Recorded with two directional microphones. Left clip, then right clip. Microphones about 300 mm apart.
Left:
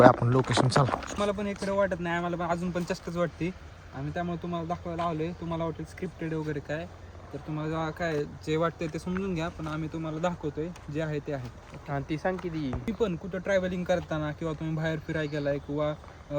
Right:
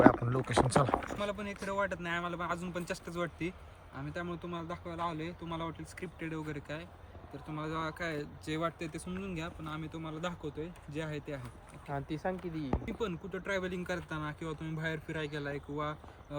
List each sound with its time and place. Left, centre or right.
0.0 s speech: centre
11.9 s speech: left
12.8 s speech: centre